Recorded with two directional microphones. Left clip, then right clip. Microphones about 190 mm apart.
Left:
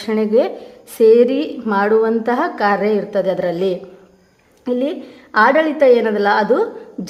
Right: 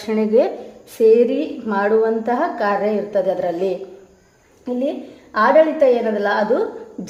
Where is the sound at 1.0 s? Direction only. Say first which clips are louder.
Left 2 dB; 25° left (ahead or behind).